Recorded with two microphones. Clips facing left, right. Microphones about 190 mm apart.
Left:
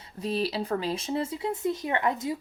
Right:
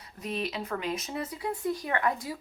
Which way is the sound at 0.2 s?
30° left (ahead or behind).